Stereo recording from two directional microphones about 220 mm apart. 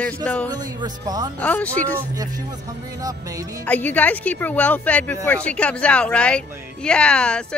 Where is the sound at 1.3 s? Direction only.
5° left (ahead or behind).